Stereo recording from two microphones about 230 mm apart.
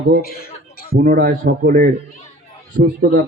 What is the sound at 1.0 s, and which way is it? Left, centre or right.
Speech, right.